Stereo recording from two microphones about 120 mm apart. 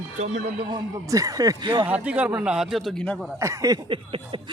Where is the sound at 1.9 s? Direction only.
10° right (ahead or behind).